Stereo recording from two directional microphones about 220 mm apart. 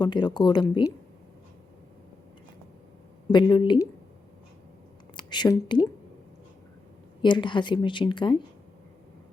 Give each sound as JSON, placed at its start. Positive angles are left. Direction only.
{"t": 0.0, "sound": "speech", "side_deg": 20}
{"t": 3.3, "sound": "speech", "side_deg": 20}
{"t": 5.1, "sound": "speech", "side_deg": 20}
{"t": 7.2, "sound": "speech", "side_deg": 20}